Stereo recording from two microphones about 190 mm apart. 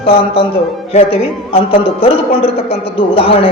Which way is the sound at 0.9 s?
30° left (ahead or behind).